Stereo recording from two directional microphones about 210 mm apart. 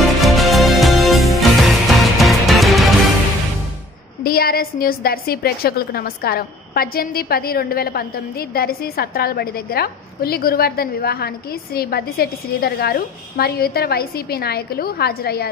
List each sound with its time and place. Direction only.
0.0 s music: centre (ahead or behind)
4.2 s a woman's voice: 45° left (ahead or behind)